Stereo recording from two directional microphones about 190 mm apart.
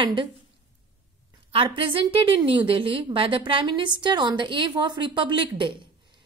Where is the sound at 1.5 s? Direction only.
30° right (ahead or behind).